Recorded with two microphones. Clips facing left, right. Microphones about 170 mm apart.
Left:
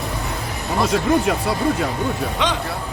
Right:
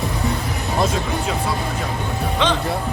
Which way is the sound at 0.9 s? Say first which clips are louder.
Left 5 dB; 70° left (ahead or behind).